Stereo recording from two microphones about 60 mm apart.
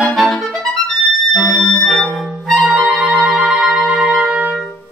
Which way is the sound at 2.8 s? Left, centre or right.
Centre.